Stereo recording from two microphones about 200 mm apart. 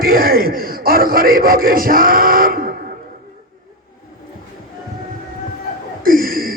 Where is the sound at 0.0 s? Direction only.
45° right (ahead or behind).